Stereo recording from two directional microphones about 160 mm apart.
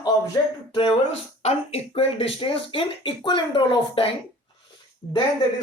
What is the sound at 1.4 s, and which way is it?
Speech, 40° left (ahead or behind).